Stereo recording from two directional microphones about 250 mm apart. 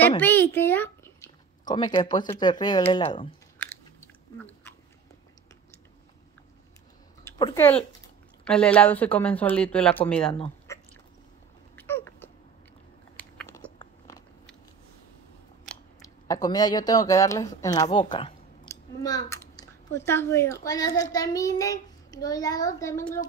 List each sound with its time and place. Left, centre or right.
0.2 s speech: centre
3.5 s biting: centre
7.2 s speech: centre
10.3 s a sound: centre
11.7 s a sound: centre
13.7 s biting: centre
15.7 s scissors: centre
16.3 s a child's voice: centre
17.8 s clicking: centre
20.1 s a child's voice: centre